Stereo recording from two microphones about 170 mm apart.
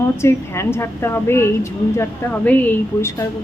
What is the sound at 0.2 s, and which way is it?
Speech, 15° left (ahead or behind).